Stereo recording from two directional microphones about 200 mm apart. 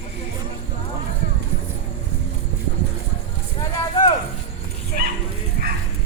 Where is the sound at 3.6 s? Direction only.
25° left (ahead or behind).